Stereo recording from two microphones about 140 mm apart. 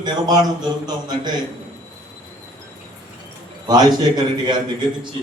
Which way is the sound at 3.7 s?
30° right (ahead or behind).